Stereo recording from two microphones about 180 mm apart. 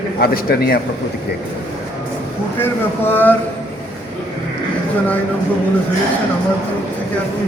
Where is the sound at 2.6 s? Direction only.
10° left (ahead or behind).